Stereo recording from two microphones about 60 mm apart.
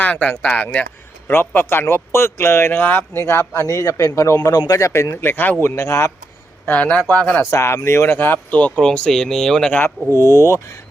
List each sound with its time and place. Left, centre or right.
0.0 s speech: left
1.3 s speech: left
3.2 s speech: left
3.7 s speech: left
4.4 s a man's voice: left
5.1 s speech: left
5.6 s speech: left
6.7 s speech: centre
7.5 s speech: left
8.0 s speech: left
8.8 s speech: centre
10.1 s speech: left